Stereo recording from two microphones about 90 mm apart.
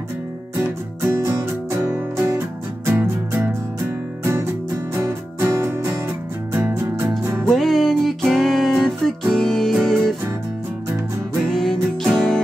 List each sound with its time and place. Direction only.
0.6 s music: 30° right (ahead or behind)
7.4 s music: centre (ahead or behind)
11.4 s music: 5° left (ahead or behind)